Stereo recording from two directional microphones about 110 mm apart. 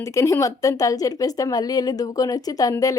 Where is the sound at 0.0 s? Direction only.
25° left (ahead or behind).